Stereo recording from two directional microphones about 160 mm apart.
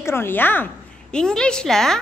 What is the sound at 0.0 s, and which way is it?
A woman's voice, 15° left (ahead or behind).